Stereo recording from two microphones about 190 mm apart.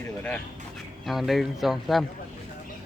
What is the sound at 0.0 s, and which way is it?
Speech, 10° left (ahead or behind).